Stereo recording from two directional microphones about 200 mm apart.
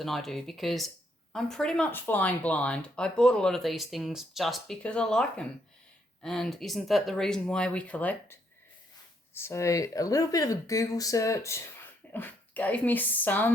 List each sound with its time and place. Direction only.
0.0 s speech: centre (ahead or behind)